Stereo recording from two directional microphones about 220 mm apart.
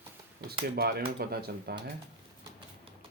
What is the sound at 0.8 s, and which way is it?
Speech, 45° right (ahead or behind).